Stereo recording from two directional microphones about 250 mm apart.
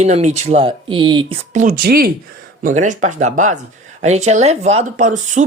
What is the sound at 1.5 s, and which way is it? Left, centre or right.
Speech, right.